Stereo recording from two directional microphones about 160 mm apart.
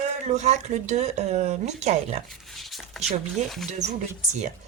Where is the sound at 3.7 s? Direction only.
45° right (ahead or behind).